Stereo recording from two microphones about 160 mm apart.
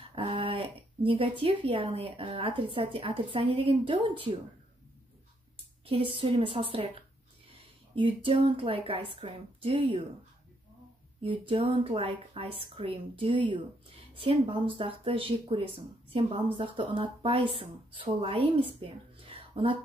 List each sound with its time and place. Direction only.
0.1 s speech: 35° right (ahead or behind)
5.9 s speech: 35° right (ahead or behind)
11.1 s speech: 35° right (ahead or behind)